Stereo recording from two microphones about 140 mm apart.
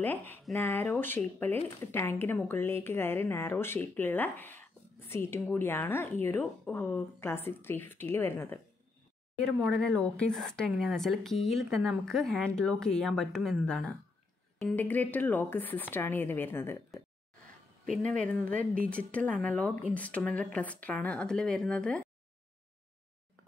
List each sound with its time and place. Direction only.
0.0 s speech: 15° left (ahead or behind)
9.6 s a woman's voice: centre (ahead or behind)
18.3 s speech: 10° left (ahead or behind)